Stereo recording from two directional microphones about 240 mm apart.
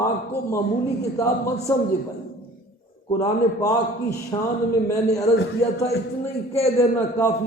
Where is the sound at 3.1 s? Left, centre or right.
Centre.